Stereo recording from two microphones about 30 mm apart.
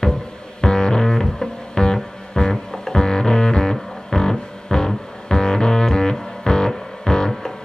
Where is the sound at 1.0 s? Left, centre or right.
Centre.